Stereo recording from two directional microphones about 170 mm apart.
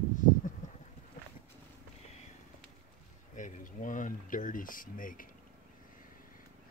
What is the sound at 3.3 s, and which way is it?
Speech, 50° left (ahead or behind).